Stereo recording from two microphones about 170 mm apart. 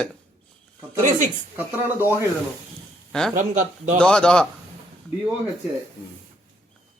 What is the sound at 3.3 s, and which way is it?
Speech, 50° right (ahead or behind).